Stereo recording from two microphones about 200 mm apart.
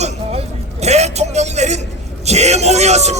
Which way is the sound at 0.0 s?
35° right (ahead or behind).